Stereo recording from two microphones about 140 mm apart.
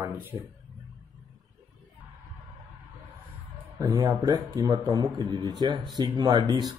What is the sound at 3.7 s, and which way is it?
Speech, 25° right (ahead or behind).